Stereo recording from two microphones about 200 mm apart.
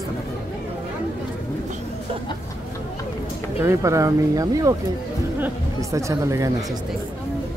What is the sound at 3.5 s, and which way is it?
Speech, 15° right (ahead or behind).